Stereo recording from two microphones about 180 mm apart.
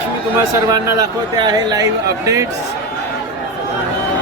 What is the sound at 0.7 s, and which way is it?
Speech, 20° right (ahead or behind).